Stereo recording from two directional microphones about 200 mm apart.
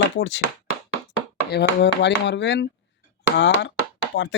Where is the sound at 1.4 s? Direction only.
55° left (ahead or behind).